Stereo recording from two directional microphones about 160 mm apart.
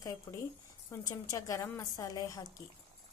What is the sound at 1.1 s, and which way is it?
A woman's voice, 20° left (ahead or behind).